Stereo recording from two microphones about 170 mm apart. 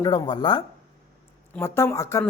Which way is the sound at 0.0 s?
25° left (ahead or behind).